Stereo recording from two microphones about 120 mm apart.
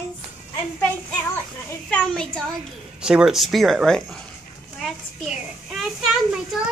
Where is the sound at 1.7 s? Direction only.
10° left (ahead or behind).